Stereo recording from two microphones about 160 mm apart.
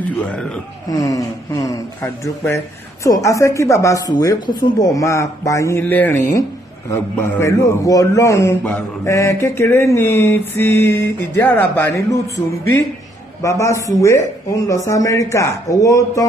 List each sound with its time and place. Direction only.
0.0 s speech: 10° left (ahead or behind)
0.8 s a man's voice: 20° left (ahead or behind)
13.4 s speech: 20° left (ahead or behind)